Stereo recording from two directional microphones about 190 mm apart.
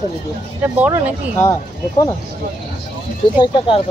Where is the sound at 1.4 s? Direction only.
20° left (ahead or behind).